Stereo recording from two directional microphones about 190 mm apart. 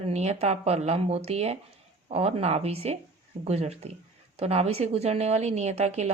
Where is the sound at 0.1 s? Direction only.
35° right (ahead or behind).